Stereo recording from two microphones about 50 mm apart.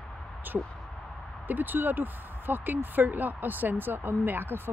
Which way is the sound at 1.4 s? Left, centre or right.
Right.